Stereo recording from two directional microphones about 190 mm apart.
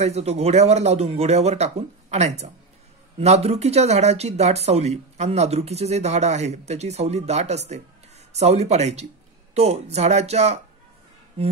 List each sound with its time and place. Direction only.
0.0 s speech: 35° right (ahead or behind)